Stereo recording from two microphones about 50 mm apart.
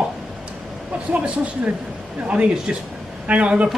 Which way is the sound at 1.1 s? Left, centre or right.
Right.